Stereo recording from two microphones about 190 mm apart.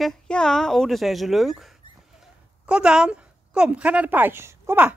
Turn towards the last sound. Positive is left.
turn(degrees=-10)  # may be behind; listen again after turning